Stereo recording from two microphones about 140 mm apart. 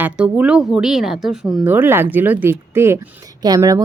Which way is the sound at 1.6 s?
15° right (ahead or behind).